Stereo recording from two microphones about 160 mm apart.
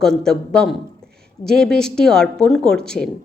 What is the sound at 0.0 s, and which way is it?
A woman's voice, 5° left (ahead or behind).